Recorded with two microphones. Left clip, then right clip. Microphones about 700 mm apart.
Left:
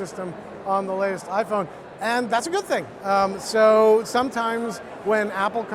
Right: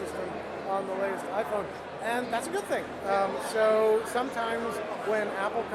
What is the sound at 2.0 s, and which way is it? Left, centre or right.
Speech, left.